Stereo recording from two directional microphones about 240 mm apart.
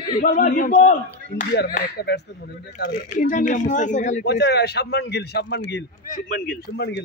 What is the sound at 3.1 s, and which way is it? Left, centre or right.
Speech, left.